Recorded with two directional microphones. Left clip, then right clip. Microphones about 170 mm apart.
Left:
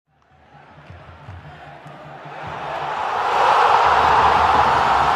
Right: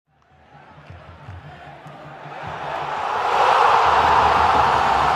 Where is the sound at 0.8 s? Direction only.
Centre (ahead or behind).